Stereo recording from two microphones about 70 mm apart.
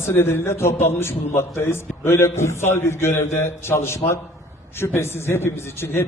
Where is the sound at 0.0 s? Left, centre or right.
Left.